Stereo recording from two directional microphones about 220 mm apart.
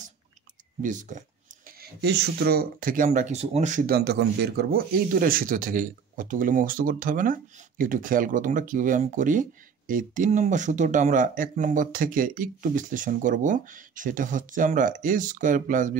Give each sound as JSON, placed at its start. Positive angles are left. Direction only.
{"t": 0.8, "sound": "speech", "side_deg": -35}
{"t": 1.8, "sound": "speech", "side_deg": -50}